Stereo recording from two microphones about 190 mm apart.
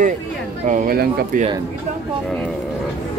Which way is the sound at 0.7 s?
45° right (ahead or behind).